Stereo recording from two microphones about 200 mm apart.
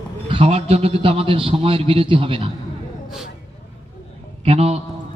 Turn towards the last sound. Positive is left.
turn(degrees=-30)  # may be behind; listen again after turning